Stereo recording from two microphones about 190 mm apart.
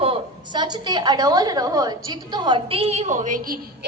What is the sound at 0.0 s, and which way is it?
A woman's voice, 25° right (ahead or behind).